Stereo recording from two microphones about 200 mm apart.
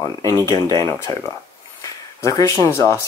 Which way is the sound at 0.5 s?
15° left (ahead or behind).